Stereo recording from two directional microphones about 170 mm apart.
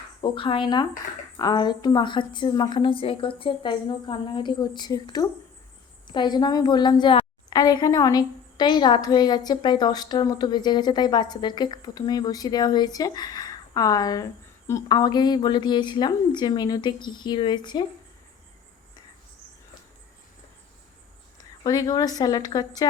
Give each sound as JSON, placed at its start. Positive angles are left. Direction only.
{"t": 0.2, "sound": "a woman's voice", "side_deg": 30}
{"t": 21.6, "sound": "a woman's voice", "side_deg": 20}